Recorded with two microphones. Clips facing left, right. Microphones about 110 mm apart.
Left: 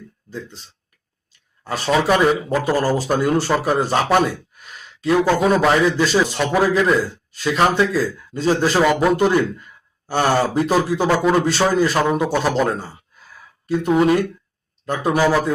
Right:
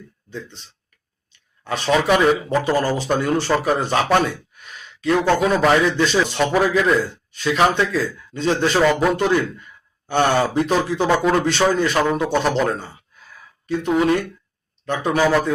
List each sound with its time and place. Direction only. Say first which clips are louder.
1.6 s speech: even; 40° left (ahead or behind)
1.9 s a man's voice: even; centre (ahead or behind)